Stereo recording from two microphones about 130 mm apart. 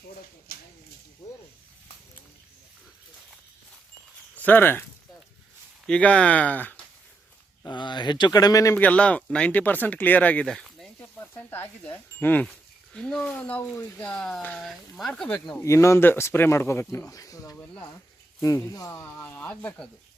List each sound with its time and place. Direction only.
4.4 s speech: 15° left (ahead or behind)
7.6 s speech: 35° left (ahead or behind)
8.8 s speech: 10° left (ahead or behind)
11.0 s speech: 15° left (ahead or behind)
15.6 s speech: 20° left (ahead or behind)
19.0 s speech: 15° left (ahead or behind)